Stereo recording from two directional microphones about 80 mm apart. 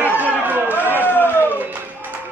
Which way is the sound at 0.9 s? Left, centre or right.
Left.